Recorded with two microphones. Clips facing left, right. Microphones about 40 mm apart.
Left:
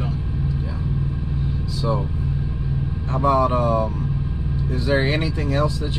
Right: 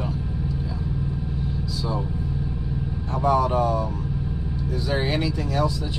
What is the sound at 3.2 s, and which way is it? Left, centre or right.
Speech, left.